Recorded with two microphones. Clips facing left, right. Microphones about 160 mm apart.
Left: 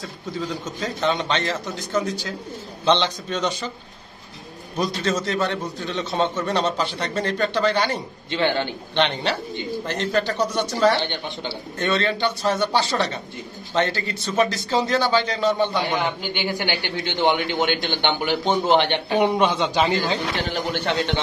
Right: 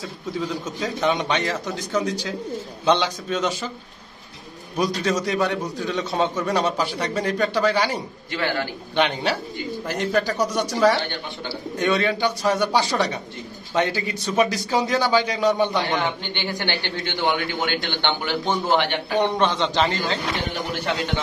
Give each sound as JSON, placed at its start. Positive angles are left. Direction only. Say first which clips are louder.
{"t": 0.4, "sound": "a man's voice", "louder": "right 1 dB", "side_deg": -10}
{"t": 1.9, "sound": "speech", "louder": "even", "side_deg": 5}
{"t": 2.8, "sound": "a man's voice", "louder": "even", "side_deg": -10}
{"t": 4.7, "sound": "a man's voice", "louder": "right 1 dB", "side_deg": -10}
{"t": 8.3, "sound": "a man's voice", "louder": "left 3 dB", "side_deg": 25}
{"t": 8.9, "sound": "a man's voice", "louder": "right 1 dB", "side_deg": -10}
{"t": 15.9, "sound": "speech", "louder": "even", "side_deg": 15}
{"t": 19.1, "sound": "speech", "louder": "left 1 dB", "side_deg": 10}
{"t": 20.8, "sound": "a man's voice", "louder": "even", "side_deg": 30}